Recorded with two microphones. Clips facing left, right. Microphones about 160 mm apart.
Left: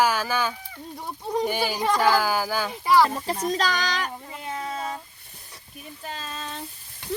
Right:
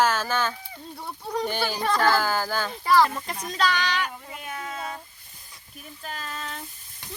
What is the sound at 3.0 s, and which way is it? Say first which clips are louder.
Speech: left 5 dB; 30° left (ahead or behind).